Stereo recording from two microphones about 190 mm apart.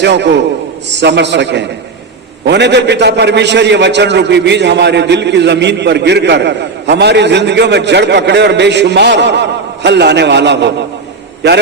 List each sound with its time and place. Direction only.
0.0 s a man's voice: 65° right (ahead or behind)